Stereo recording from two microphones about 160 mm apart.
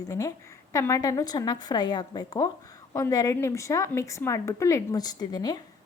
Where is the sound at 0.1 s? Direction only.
20° left (ahead or behind).